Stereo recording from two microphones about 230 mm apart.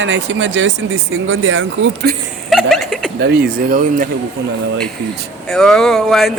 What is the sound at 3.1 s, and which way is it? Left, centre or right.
Speech, right.